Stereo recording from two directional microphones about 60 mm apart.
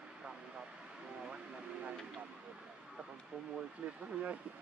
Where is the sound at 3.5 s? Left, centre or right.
Centre.